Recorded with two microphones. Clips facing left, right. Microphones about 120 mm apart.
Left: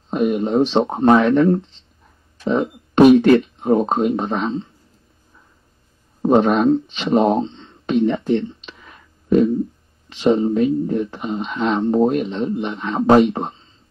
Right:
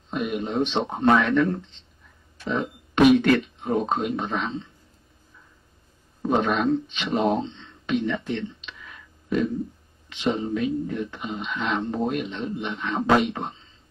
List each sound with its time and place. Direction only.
0.1 s speech: 35° left (ahead or behind)
6.2 s speech: 40° left (ahead or behind)